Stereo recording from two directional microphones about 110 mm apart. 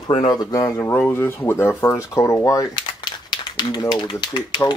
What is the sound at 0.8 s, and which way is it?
Speech, 20° left (ahead or behind).